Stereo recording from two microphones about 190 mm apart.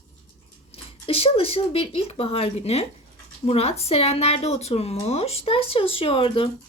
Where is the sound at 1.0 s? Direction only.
30° left (ahead or behind).